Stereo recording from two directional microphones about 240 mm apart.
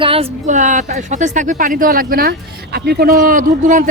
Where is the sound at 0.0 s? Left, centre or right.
Right.